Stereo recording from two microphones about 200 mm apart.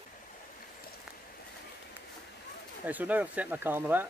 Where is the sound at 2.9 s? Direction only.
10° right (ahead or behind).